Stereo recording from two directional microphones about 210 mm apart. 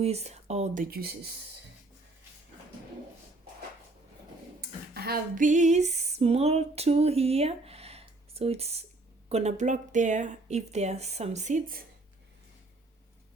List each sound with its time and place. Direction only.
0.0 s speech: 30° right (ahead or behind); by 1.3 s 45° right (ahead or behind)
4.9 s a sound: 45° right (ahead or behind)
9.3 s speech: 30° right (ahead or behind)